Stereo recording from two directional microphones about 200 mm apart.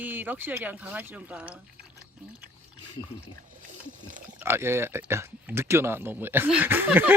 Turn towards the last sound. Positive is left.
turn(degrees=-10)  # may be behind; listen again after turning